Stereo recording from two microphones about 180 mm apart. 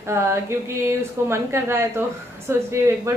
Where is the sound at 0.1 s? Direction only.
15° right (ahead or behind).